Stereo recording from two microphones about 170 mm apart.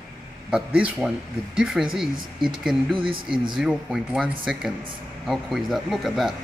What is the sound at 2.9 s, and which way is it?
Speech, 30° right (ahead or behind).